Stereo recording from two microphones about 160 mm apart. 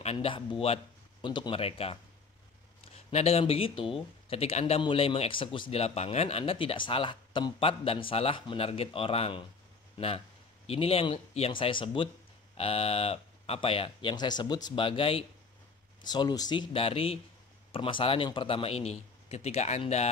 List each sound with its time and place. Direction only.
0.0 s speech: 40° left (ahead or behind)
3.1 s speech: 40° left (ahead or behind)